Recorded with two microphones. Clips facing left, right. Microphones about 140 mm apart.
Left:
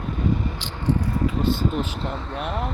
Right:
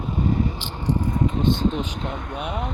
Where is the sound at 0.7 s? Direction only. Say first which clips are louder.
Left 1 dB; 15° right (ahead or behind).